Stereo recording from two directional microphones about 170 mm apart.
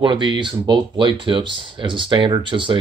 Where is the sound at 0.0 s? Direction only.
25° right (ahead or behind).